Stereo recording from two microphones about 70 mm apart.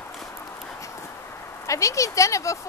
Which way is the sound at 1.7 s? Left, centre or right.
Left.